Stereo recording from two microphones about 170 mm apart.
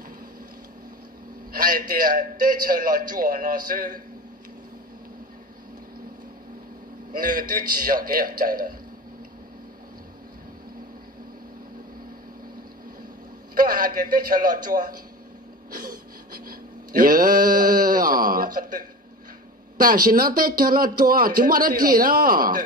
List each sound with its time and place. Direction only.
1.5 s a man's voice: 55° right (ahead or behind)
7.1 s speech: 55° right (ahead or behind)
13.6 s a man's voice: 55° right (ahead or behind)
15.7 s a sound: 55° right (ahead or behind)
19.8 s speech: 55° right (ahead or behind)